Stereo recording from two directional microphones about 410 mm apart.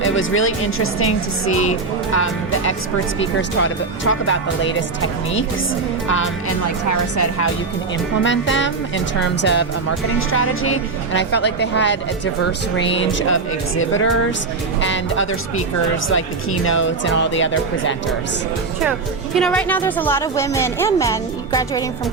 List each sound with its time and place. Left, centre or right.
0.0 s a woman's voice: left
3.6 s a woman's voice: left
6.9 s speech: left
8.2 s a woman's voice: left
18.8 s a woman's voice: centre